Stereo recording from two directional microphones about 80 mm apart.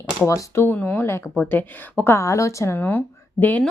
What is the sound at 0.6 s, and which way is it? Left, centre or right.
Speech, left.